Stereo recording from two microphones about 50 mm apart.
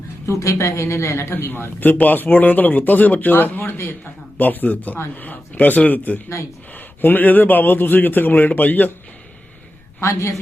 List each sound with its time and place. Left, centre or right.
0.3 s a woman's voice: left
1.3 s a man's voice: left
10.0 s a woman's voice: left